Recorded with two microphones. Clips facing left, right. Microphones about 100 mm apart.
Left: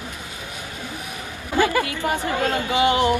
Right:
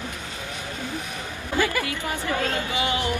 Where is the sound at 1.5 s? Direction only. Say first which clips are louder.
Left 5 dB; 20° left (ahead or behind).